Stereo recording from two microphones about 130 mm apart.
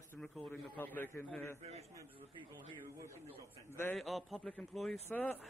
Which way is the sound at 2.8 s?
25° right (ahead or behind).